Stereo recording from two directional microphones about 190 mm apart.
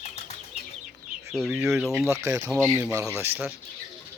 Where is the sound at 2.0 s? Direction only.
15° right (ahead or behind).